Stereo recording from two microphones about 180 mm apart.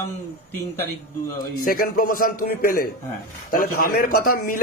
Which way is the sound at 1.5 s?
55° left (ahead or behind).